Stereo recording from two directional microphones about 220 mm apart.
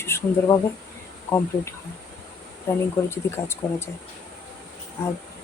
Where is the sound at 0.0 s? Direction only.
15° left (ahead or behind).